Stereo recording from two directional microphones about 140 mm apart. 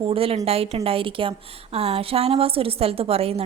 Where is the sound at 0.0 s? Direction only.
40° right (ahead or behind).